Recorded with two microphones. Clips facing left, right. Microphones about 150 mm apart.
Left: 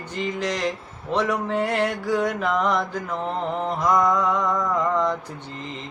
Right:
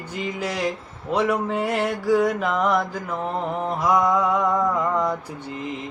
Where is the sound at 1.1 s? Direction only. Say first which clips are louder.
Right 1 dB; 10° right (ahead or behind).